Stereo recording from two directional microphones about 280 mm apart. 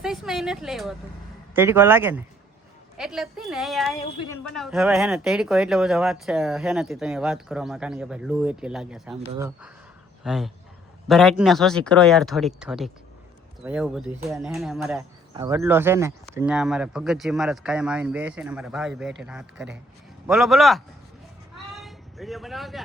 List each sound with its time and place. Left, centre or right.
0.0 s a man's voice: centre
15.3 s speech: centre
21.7 s a sound: centre